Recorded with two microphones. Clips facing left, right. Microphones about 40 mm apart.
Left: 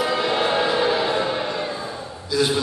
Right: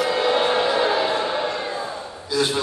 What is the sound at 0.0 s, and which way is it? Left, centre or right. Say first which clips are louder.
Music: right 1 dB; centre.